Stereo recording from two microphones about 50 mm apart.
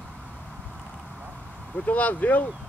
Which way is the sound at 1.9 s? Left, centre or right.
Left.